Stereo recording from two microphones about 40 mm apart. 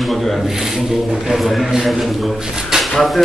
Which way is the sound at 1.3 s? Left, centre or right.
Centre.